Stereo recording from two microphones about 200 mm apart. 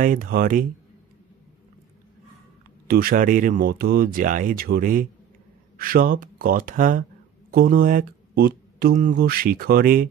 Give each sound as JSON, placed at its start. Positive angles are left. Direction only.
{"t": 0.0, "sound": "speech", "side_deg": -45}
{"t": 2.9, "sound": "speech", "side_deg": -45}